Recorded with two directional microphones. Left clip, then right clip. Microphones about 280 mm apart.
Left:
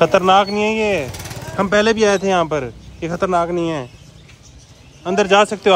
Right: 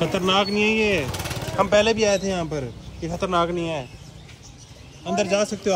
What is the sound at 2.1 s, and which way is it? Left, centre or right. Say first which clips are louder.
Speech: left 7 dB; left.